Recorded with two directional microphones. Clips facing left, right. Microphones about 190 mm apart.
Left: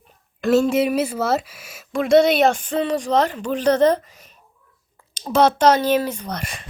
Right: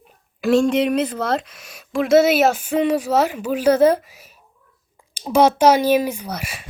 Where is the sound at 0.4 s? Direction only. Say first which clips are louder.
Right 1 dB; 5° left (ahead or behind).